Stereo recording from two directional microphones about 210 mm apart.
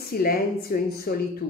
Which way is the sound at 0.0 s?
45° left (ahead or behind).